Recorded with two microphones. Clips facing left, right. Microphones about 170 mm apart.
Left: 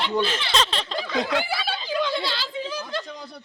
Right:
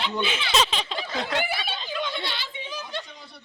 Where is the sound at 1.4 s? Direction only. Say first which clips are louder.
Left 1 dB; 90° left.